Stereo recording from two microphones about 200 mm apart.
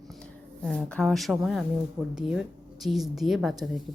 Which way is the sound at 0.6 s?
5° left (ahead or behind).